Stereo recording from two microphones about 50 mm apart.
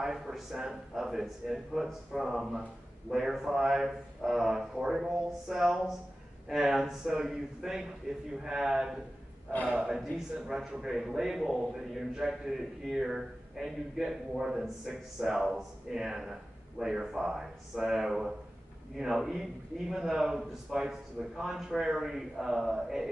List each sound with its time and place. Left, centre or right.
0.0 s a man's voice: centre
9.7 s speech: centre
9.9 s a man's voice: centre